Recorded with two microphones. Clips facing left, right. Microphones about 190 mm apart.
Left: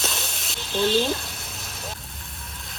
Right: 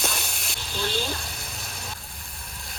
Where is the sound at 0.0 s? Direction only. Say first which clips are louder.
Even; centre (ahead or behind).